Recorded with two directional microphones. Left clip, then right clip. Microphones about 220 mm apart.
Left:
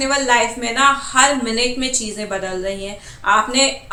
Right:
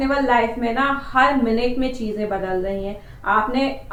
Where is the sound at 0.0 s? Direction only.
10° left (ahead or behind).